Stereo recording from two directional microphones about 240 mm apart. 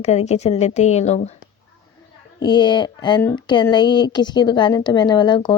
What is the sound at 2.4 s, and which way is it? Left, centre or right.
Speech, centre.